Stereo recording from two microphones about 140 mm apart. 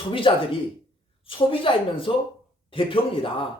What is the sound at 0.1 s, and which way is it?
A man's voice, 40° left (ahead or behind).